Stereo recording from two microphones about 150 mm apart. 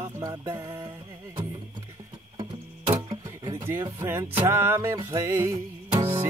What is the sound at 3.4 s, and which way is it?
Speech, 20° right (ahead or behind).